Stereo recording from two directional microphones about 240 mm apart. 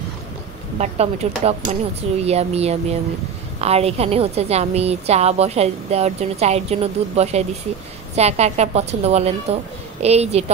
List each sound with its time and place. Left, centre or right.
0.7 s a woman's voice: right